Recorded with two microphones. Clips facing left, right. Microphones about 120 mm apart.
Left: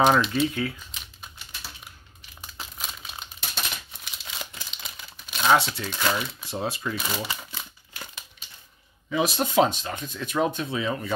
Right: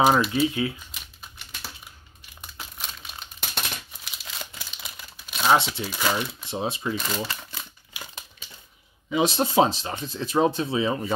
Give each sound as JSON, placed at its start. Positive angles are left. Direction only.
{"t": 0.0, "sound": "speech", "side_deg": -5}
{"t": 2.4, "sound": "crumpling", "side_deg": 0}
{"t": 6.4, "sound": "speech", "side_deg": -20}
{"t": 7.0, "sound": "speech", "side_deg": 5}
{"t": 9.1, "sound": "speech", "side_deg": -25}